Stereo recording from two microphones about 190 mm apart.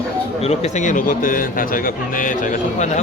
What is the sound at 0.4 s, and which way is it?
A man's voice, 40° left (ahead or behind).